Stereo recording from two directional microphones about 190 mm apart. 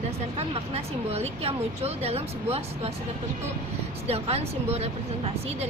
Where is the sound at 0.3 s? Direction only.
35° right (ahead or behind).